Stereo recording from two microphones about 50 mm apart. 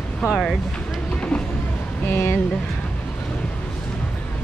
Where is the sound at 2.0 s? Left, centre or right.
Left.